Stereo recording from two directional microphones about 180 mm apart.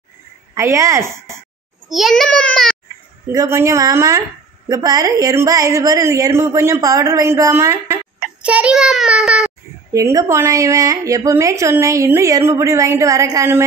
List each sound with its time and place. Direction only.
0.6 s a woman's voice: 15° right (ahead or behind)
1.9 s a child's voice: centre (ahead or behind)
3.3 s a woman's voice: 15° right (ahead or behind)
9.9 s a woman's voice: 15° right (ahead or behind)